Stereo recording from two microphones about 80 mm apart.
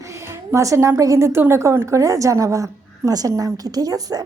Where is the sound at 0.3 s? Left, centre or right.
Right.